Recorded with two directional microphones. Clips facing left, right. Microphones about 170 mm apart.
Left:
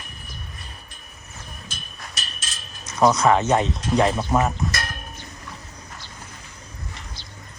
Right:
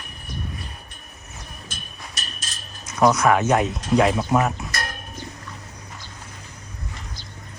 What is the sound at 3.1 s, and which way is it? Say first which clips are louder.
Speech: even; 25° left (ahead or behind).